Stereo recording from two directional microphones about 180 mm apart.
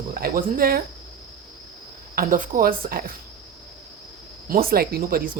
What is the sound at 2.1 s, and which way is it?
Speech, 50° right (ahead or behind).